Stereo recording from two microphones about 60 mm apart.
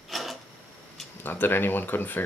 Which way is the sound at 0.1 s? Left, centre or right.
Centre.